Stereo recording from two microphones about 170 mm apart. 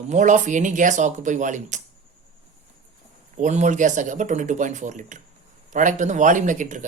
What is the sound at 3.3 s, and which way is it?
Speech, 45° right (ahead or behind).